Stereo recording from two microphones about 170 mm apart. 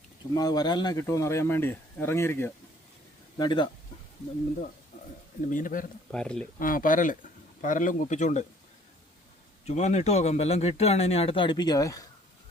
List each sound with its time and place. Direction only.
0.3 s speech: 20° left (ahead or behind)
3.3 s speech: 25° left (ahead or behind)
5.5 s speech: 50° left (ahead or behind)
6.1 s speech: 5° left (ahead or behind)
6.6 s speech: 55° left (ahead or behind)
9.6 s speech: 40° left (ahead or behind); by 12.0 s 20° left (ahead or behind)